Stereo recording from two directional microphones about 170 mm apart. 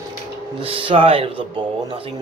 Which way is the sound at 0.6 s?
30° right (ahead or behind).